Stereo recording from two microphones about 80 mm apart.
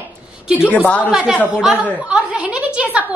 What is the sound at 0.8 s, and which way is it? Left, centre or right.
Speech, centre.